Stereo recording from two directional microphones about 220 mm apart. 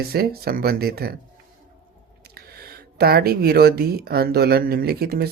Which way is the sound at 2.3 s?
45° right (ahead or behind).